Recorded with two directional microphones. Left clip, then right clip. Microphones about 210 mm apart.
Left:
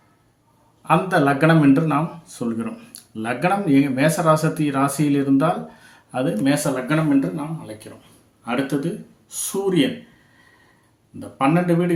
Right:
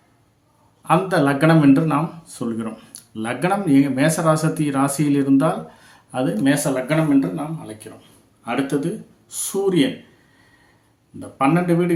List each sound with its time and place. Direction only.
0.8 s speech: 5° right (ahead or behind)
11.2 s speech: 5° right (ahead or behind)